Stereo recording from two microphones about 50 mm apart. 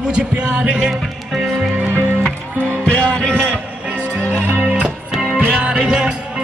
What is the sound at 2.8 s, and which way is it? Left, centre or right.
Music, left.